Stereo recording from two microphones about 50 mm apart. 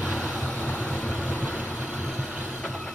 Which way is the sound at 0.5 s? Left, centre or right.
Left.